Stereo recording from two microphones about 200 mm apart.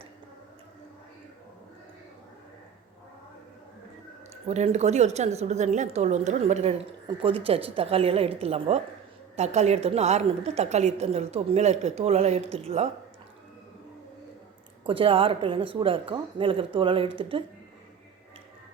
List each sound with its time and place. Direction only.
4.4 s a woman's voice: 35° right (ahead or behind)
14.8 s a woman's voice: 25° right (ahead or behind)